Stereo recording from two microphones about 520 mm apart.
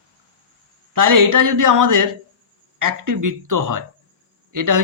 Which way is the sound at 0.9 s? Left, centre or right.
Right.